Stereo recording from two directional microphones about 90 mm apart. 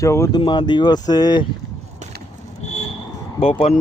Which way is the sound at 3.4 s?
90° left.